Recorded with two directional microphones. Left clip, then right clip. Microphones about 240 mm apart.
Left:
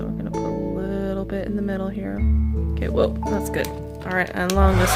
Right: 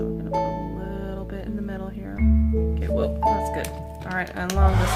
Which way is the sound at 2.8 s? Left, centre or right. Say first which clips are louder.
Left 3 dB; left.